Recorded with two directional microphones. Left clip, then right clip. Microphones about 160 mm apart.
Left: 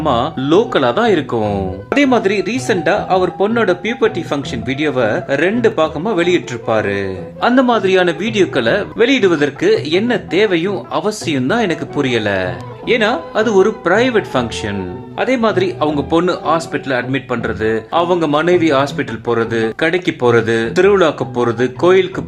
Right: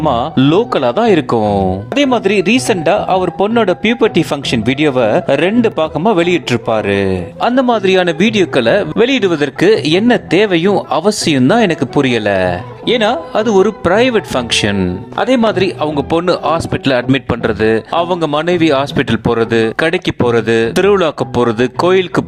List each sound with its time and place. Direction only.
0.0 s a man's voice: 45° right (ahead or behind)